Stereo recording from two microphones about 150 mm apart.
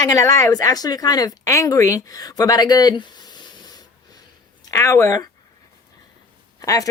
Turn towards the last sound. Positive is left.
turn(degrees=20)  # may be behind; listen again after turning